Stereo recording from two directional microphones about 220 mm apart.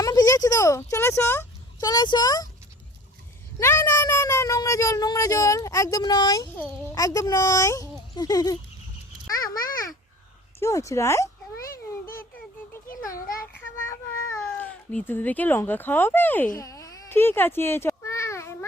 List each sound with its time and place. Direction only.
0.0 s speech: 15° left (ahead or behind)
3.6 s speech: 10° left (ahead or behind)
9.2 s a sound: 15° left (ahead or behind)
10.6 s speech: 15° left (ahead or behind)
12.9 s a sound: 40° left (ahead or behind)
13.8 s child singing: 10° left (ahead or behind)
14.6 s speech: 5° left (ahead or behind)
16.6 s baby cry: 15° left (ahead or behind)